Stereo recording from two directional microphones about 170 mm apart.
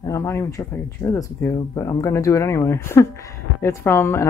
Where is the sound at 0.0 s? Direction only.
20° left (ahead or behind).